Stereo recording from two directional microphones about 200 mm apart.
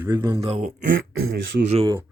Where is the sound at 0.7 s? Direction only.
80° right.